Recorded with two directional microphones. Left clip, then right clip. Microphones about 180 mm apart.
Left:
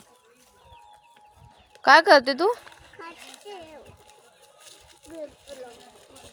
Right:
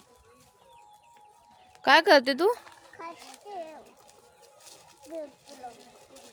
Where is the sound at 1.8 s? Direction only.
15° right (ahead or behind).